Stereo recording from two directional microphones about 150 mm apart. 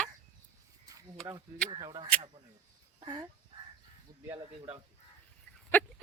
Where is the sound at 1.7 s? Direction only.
30° right (ahead or behind).